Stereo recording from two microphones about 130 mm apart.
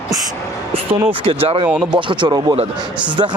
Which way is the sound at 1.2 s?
45° right (ahead or behind).